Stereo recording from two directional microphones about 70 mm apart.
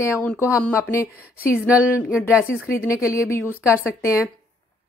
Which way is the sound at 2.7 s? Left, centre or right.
Left.